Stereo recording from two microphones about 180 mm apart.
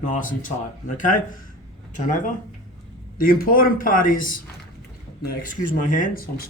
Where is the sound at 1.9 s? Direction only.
45° left (ahead or behind).